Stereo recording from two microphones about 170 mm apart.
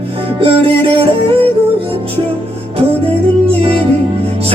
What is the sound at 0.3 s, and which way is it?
Music, 30° right (ahead or behind).